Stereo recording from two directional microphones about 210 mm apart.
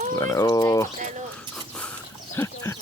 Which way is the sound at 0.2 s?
15° left (ahead or behind).